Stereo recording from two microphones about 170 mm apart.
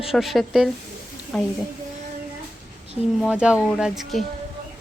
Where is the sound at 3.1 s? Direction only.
5° right (ahead or behind).